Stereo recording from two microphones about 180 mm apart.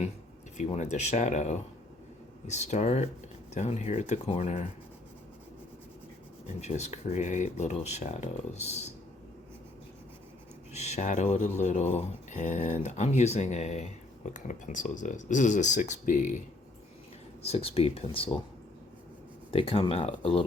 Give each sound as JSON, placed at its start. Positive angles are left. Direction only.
{"t": 0.5, "sound": "speech", "side_deg": 40}
{"t": 6.6, "sound": "speech", "side_deg": 40}
{"t": 10.8, "sound": "speech", "side_deg": 40}
{"t": 17.4, "sound": "speech", "side_deg": 35}
{"t": 19.5, "sound": "speech", "side_deg": 30}